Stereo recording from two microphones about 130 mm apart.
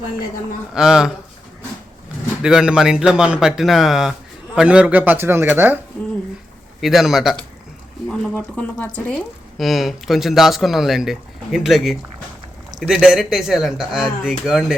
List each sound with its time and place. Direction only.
0.7 s speech: 5° right (ahead or behind)
2.4 s a man's voice: 5° right (ahead or behind)
6.8 s speech: centre (ahead or behind)
8.5 s speech: 10° left (ahead or behind)
9.6 s speech: centre (ahead or behind)